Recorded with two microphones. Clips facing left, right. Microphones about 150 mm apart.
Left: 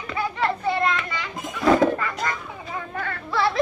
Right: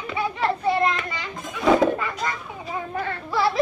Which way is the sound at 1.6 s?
5° right (ahead or behind).